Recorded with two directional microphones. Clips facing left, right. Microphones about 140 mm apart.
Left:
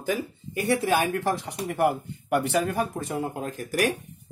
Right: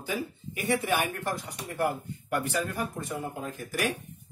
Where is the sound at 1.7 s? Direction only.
75° left (ahead or behind).